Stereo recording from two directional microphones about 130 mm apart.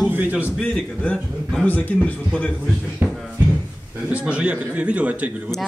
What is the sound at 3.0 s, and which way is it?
Music, 15° right (ahead or behind).